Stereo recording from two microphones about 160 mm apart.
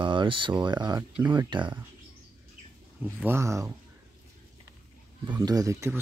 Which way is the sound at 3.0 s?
10° right (ahead or behind).